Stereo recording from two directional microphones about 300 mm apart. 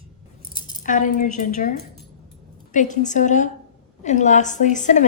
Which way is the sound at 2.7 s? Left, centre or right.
Left.